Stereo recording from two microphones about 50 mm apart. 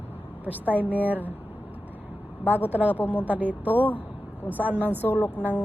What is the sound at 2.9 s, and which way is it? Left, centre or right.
Speech, left.